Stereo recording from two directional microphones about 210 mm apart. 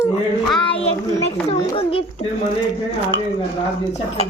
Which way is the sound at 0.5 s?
25° left (ahead or behind).